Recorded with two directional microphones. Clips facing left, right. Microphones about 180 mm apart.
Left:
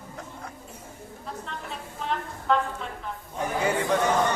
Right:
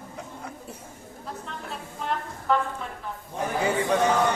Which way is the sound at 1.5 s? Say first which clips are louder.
Even; centre (ahead or behind).